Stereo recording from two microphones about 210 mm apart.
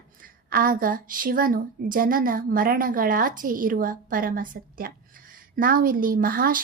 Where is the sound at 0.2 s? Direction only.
40° right (ahead or behind).